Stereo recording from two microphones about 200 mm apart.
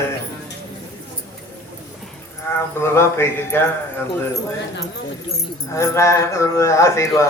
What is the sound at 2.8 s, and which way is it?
Speech, 15° left (ahead or behind).